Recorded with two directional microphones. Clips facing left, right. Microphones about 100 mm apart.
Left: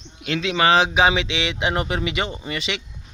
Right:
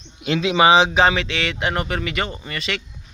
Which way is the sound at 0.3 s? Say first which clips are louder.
Right 3 dB; 15° right (ahead or behind).